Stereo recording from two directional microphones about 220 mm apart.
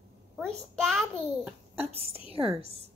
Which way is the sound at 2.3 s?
25° right (ahead or behind).